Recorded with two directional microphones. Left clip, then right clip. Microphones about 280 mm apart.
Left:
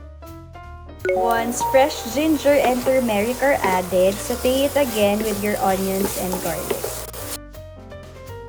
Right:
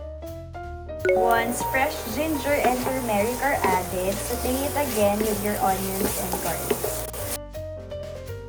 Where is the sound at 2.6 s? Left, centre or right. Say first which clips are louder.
Left 5 dB; centre.